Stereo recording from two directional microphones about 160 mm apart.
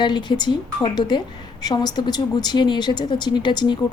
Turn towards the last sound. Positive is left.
turn(degrees=30)  # may be behind; listen again after turning